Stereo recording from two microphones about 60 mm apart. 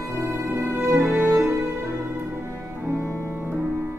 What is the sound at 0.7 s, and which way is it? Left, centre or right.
Music, right.